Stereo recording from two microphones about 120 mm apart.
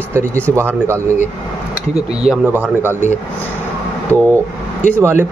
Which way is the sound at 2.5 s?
15° right (ahead or behind).